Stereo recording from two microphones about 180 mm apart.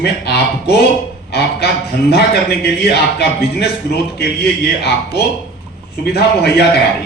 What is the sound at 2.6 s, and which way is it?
A man's voice, 65° left (ahead or behind).